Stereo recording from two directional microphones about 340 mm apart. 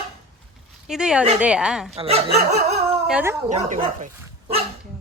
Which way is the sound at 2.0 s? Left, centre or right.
Centre.